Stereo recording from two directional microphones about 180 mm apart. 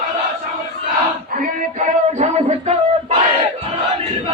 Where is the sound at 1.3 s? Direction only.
45° right (ahead or behind).